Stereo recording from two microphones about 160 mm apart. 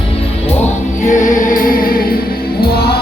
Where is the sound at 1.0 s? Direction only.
50° left (ahead or behind).